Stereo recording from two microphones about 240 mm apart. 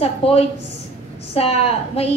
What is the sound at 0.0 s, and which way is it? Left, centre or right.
A woman's voice, left.